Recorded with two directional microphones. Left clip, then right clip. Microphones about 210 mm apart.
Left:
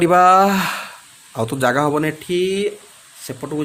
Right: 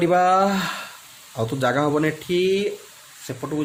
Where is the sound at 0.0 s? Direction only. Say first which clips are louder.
Left 6 dB; 35° left (ahead or behind).